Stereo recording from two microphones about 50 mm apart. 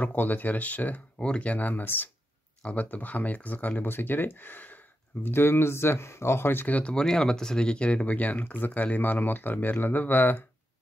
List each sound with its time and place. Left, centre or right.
0.0 s speech: left
5.2 s speech: left
6.5 s speech: left
6.8 s speech: centre; by 10.4 s left